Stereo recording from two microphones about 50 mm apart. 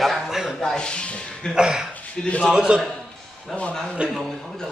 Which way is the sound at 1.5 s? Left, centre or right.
Centre.